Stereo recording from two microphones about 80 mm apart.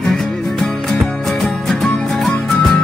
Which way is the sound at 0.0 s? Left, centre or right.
Centre.